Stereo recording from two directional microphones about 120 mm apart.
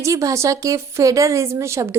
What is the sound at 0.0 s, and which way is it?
Speech, 25° right (ahead or behind).